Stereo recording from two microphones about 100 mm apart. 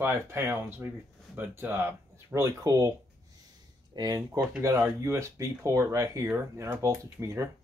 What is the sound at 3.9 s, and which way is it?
Speech, 40° right (ahead or behind).